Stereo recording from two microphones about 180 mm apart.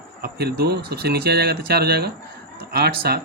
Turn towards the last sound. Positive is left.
turn(degrees=-60)  # may be behind; listen again after turning